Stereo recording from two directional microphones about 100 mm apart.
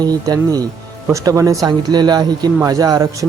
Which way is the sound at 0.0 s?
40° right (ahead or behind).